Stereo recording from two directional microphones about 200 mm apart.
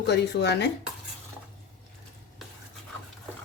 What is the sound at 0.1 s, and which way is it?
Speech, 55° left (ahead or behind).